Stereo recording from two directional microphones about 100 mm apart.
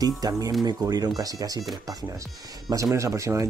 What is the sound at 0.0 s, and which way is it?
Speech, 35° right (ahead or behind).